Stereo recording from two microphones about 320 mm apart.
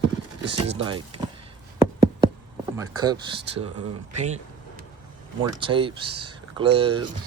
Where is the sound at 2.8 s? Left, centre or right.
Centre.